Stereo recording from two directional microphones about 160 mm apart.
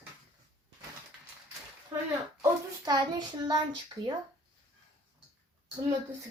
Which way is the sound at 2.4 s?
25° right (ahead or behind).